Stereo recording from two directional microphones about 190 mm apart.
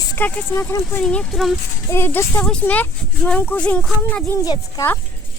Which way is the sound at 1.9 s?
10° left (ahead or behind).